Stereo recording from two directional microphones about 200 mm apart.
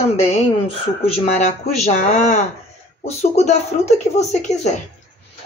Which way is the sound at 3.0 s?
35° left (ahead or behind).